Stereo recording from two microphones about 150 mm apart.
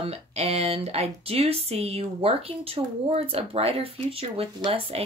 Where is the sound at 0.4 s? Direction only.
45° right (ahead or behind).